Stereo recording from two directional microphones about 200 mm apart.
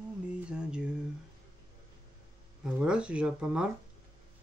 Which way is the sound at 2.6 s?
5° right (ahead or behind).